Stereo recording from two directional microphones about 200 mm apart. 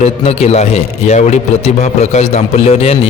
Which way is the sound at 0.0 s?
30° left (ahead or behind).